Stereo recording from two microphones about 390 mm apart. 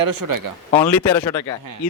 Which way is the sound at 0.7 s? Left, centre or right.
Centre.